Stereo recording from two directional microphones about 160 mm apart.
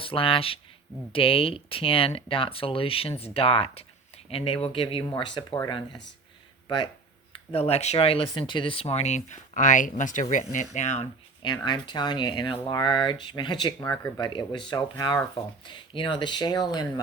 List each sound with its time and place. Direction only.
0.0 s speech: 35° left (ahead or behind)
7.3 s speech: 40° left (ahead or behind)
11.4 s speech: 25° left (ahead or behind)
13.7 s speech: 15° left (ahead or behind)
14.2 s speech: 30° left (ahead or behind)